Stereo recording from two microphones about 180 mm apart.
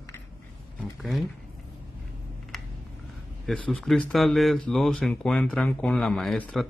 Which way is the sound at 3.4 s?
Centre (ahead or behind).